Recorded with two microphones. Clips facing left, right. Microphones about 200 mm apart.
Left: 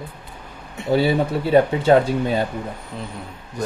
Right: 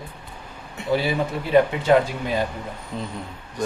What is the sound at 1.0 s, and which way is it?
Speech, 30° left (ahead or behind).